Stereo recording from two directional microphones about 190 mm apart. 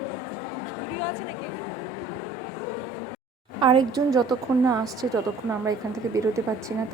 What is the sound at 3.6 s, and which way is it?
A woman's voice, 25° right (ahead or behind).